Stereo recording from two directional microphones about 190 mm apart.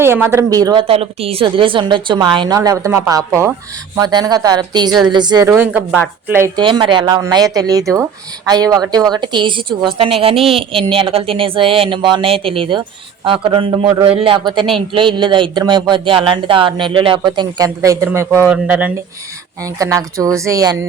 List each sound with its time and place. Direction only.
0.0 s a woman's voice: 10° right (ahead or behind)
5.5 s a woman's voice: 5° right (ahead or behind)
6.6 s a woman's voice: 25° right (ahead or behind)